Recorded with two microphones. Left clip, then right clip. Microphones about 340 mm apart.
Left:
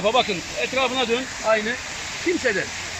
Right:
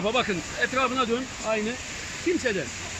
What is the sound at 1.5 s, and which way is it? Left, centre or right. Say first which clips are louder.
Speech: left 7 dB; left.